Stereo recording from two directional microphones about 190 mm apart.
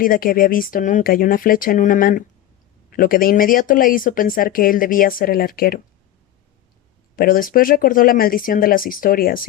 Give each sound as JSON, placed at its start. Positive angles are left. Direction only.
{"t": 0.0, "sound": "speech", "side_deg": 50}
{"t": 7.2, "sound": "speech", "side_deg": 50}